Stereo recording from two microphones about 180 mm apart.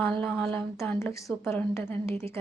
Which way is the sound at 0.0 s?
10° left (ahead or behind).